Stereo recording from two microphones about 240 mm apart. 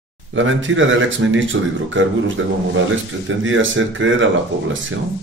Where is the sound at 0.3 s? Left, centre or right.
Right.